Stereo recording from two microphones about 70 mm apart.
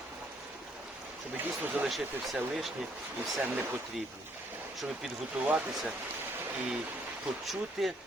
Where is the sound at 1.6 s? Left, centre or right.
Right.